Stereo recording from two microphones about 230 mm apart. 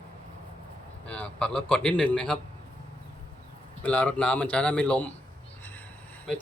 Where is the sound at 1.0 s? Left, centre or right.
Centre.